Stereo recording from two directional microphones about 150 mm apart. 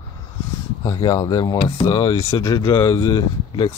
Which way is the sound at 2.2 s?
20° left (ahead or behind).